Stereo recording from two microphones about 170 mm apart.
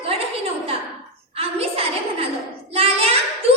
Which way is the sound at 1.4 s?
35° right (ahead or behind).